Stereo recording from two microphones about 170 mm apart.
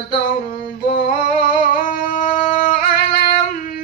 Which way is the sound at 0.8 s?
50° left (ahead or behind).